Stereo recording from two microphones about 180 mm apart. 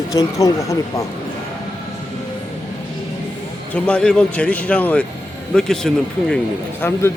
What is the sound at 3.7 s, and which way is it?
Speech, 5° left (ahead or behind).